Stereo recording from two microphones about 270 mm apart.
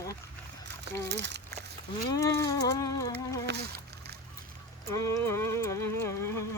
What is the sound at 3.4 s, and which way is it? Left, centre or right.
Splash, right.